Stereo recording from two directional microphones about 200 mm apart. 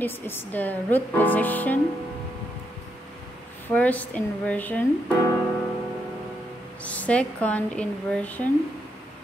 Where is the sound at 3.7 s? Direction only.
10° left (ahead or behind).